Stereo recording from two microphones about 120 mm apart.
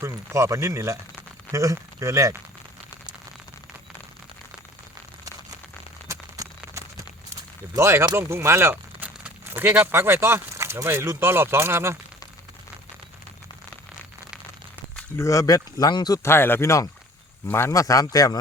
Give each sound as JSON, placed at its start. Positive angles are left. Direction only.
{"t": 0.0, "sound": "speech", "side_deg": -25}
{"t": 6.1, "sound": "a sound", "side_deg": -30}
{"t": 7.8, "sound": "speech", "side_deg": -20}
{"t": 15.2, "sound": "a man's voice", "side_deg": 25}